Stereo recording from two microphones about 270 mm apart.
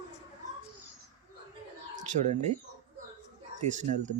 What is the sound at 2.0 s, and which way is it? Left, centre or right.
Speech, right.